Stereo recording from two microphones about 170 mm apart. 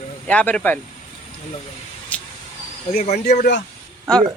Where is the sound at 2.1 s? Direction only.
10° left (ahead or behind).